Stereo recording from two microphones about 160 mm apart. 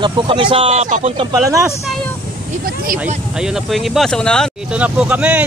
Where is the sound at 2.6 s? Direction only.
65° right (ahead or behind).